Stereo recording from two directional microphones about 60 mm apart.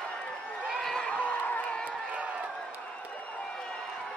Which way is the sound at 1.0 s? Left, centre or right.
Left.